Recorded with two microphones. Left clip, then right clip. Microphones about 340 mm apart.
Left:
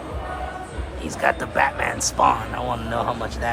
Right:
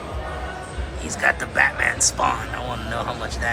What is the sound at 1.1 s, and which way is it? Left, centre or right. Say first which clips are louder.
Speech: right 1 dB; centre.